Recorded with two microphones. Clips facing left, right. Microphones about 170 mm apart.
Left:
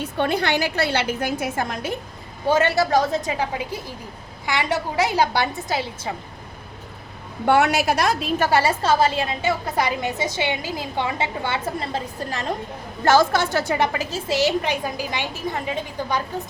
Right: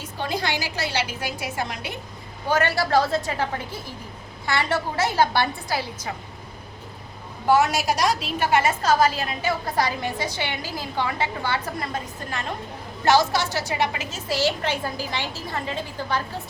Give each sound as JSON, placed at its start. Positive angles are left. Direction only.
{"t": 0.0, "sound": "a woman's voice", "side_deg": 60}
{"t": 2.5, "sound": "a woman's voice", "side_deg": 25}
{"t": 7.4, "sound": "a woman's voice", "side_deg": 65}
{"t": 13.1, "sound": "a woman's voice", "side_deg": 50}
{"t": 14.3, "sound": "a woman's voice", "side_deg": 20}